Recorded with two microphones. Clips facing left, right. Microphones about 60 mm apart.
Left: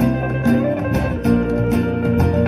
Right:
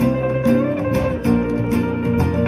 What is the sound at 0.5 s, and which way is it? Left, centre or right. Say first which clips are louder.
Music: left 1 dB; right.